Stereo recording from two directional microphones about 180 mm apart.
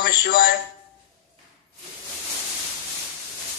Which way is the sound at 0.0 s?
50° left (ahead or behind).